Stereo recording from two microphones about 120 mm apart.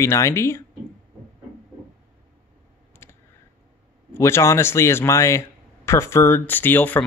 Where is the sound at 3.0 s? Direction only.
20° left (ahead or behind).